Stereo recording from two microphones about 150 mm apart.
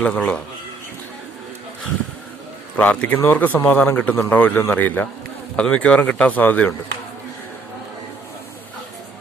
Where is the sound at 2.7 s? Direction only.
5° left (ahead or behind).